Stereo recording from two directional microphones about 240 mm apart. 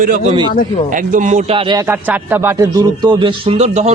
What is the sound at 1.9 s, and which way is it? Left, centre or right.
Speech, centre.